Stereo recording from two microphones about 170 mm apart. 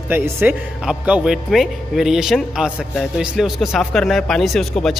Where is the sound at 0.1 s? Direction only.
15° right (ahead or behind).